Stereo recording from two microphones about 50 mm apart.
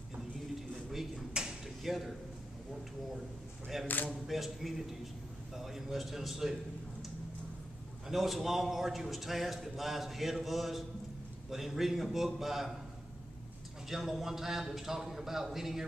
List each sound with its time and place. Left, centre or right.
0.6 s a sound: centre
1.8 s speech: centre
3.8 s speech: left
4.3 s a man's voice: centre
8.1 s a man's voice: centre
13.8 s a man's voice: centre